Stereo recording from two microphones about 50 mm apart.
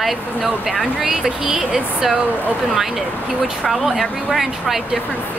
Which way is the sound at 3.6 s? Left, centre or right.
Centre.